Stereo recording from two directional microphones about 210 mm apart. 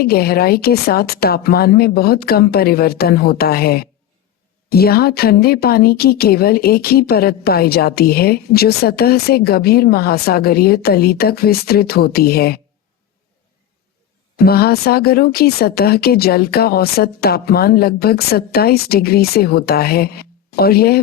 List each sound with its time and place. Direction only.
0.0 s speech: 45° left (ahead or behind)
14.3 s speech: 45° left (ahead or behind)